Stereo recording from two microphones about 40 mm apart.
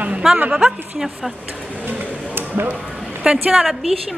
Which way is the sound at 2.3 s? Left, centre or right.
Right.